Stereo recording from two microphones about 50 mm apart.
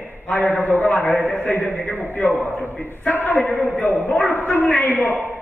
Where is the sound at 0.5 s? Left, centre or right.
Left.